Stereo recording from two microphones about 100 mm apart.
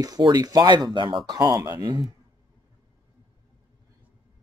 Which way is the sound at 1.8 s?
45° right (ahead or behind).